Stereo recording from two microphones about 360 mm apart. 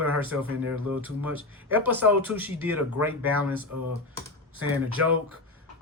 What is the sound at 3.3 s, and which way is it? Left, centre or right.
Speech, right.